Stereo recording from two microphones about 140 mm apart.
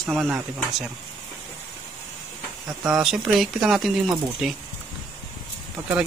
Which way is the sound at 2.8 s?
5° right (ahead or behind).